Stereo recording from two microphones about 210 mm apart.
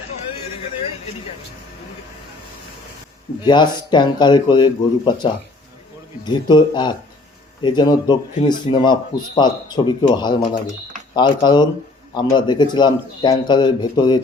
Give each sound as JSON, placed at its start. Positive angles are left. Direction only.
{"t": 3.4, "sound": "a man's voice", "side_deg": 20}